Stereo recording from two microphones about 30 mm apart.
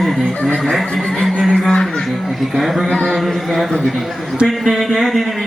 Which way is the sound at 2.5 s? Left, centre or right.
Centre.